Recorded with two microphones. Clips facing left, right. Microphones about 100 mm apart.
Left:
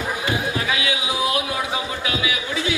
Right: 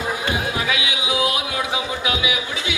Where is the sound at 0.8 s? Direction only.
20° right (ahead or behind).